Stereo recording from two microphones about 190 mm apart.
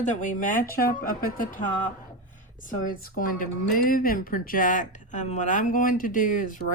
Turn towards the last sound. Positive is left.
turn(degrees=45)  # may be behind; listen again after turning